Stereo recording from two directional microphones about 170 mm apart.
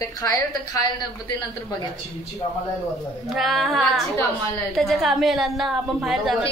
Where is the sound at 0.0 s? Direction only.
20° left (ahead or behind).